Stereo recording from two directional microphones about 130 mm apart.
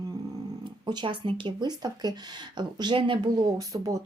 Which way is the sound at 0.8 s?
35° right (ahead or behind).